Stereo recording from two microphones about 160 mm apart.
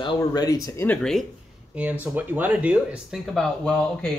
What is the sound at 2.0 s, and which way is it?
Speech, 10° right (ahead or behind).